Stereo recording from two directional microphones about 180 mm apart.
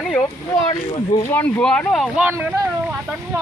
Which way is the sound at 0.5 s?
20° left (ahead or behind).